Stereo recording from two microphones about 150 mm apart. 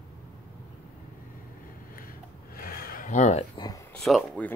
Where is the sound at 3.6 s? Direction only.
25° left (ahead or behind).